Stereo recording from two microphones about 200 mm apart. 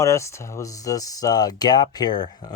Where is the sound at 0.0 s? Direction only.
15° left (ahead or behind).